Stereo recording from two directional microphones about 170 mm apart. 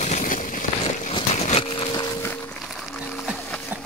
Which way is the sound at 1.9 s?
25° left (ahead or behind).